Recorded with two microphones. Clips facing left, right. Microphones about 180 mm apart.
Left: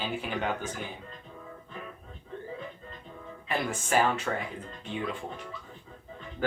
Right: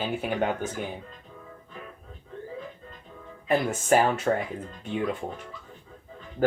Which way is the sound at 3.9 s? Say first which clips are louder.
Right 5 dB; 50° right (ahead or behind).